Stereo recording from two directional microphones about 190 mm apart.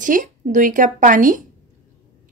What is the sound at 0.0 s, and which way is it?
A woman's voice, 45° right (ahead or behind).